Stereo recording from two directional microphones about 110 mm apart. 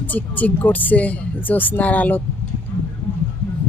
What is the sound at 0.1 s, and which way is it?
Speech, 15° left (ahead or behind).